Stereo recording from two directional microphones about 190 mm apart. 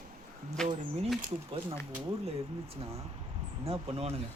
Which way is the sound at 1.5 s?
25° right (ahead or behind).